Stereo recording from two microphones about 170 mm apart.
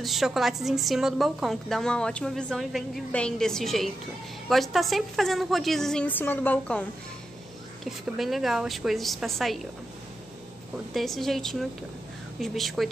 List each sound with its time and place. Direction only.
0.0 s a woman's voice: centre (ahead or behind)
10.9 s a woman's voice: centre (ahead or behind)